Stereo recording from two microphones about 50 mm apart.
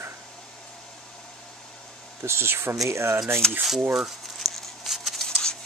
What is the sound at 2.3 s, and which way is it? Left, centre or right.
Speech, right.